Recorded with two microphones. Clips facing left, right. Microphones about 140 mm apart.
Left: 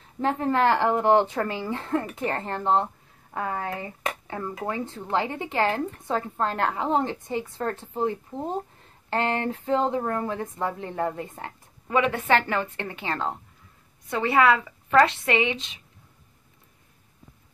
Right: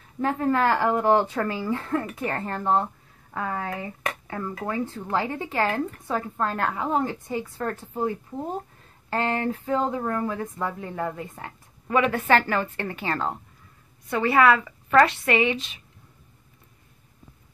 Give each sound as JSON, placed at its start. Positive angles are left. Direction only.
{"t": 0.2, "sound": "speech", "side_deg": 25}